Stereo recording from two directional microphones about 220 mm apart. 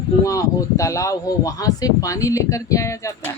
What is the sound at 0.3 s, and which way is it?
Speech, 15° left (ahead or behind).